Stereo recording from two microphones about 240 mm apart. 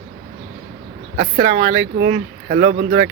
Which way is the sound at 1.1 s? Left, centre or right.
Right.